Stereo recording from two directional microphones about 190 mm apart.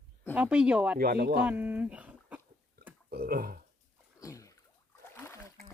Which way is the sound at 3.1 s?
55° right (ahead or behind).